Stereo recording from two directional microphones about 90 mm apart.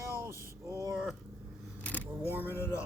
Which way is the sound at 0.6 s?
40° right (ahead or behind).